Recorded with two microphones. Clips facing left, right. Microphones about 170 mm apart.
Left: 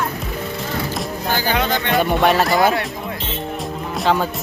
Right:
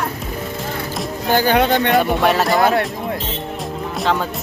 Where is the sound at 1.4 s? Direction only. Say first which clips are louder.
Right 7 dB; 55° right (ahead or behind).